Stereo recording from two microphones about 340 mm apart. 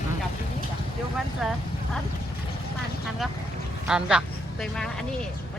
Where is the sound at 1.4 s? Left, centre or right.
Centre.